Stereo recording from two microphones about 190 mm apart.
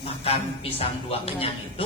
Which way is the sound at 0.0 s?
30° left (ahead or behind).